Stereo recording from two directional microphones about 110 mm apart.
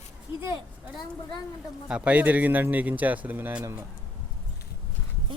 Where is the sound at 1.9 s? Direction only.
10° right (ahead or behind).